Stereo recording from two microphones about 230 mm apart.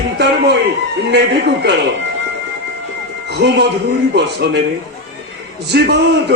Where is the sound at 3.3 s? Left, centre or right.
Right.